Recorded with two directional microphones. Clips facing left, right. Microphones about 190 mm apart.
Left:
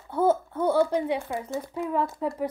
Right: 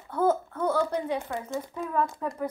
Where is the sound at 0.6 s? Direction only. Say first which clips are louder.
Left 5 dB; 30° left (ahead or behind).